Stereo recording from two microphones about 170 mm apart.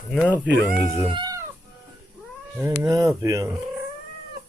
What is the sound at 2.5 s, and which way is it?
Speech, 15° right (ahead or behind).